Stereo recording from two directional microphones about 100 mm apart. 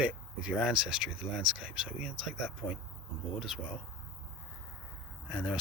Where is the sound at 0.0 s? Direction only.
10° right (ahead or behind).